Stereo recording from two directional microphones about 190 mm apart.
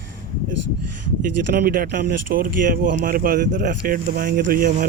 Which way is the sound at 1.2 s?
50° right (ahead or behind).